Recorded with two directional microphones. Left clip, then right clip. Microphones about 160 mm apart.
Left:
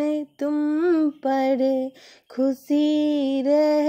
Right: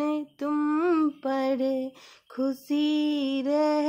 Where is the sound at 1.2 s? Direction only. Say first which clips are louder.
Left 6 dB; 25° left (ahead or behind).